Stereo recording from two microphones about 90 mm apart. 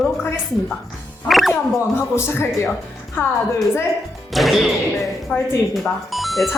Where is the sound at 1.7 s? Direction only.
30° left (ahead or behind).